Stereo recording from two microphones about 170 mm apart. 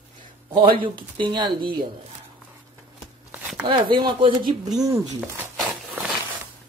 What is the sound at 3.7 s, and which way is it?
Speech, 25° right (ahead or behind).